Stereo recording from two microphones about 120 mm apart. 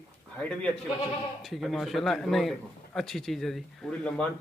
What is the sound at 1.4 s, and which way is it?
A man's voice, centre (ahead or behind).